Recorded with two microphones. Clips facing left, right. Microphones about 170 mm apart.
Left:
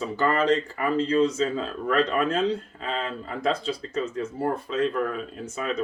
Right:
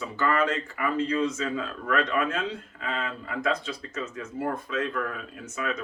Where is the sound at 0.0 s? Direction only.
35° left (ahead or behind).